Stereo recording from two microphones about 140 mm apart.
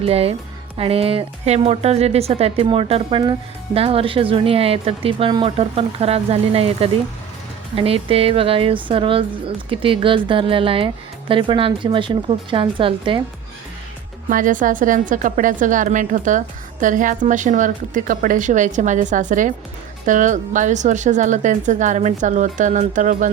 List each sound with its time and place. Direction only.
0.0 s speech: 45° right (ahead or behind)
14.3 s a woman's voice: 70° right (ahead or behind)